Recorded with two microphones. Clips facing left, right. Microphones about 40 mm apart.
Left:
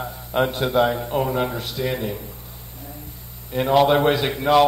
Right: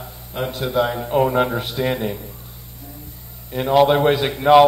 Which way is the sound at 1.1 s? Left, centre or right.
Centre.